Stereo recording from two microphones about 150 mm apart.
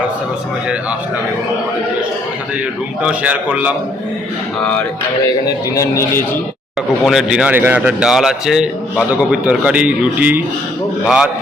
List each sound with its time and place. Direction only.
3.0 s a man's voice: 10° right (ahead or behind)
4.6 s music: 5° left (ahead or behind)
5.5 s a man's voice: 20° left (ahead or behind)
7.0 s a man's voice: centre (ahead or behind)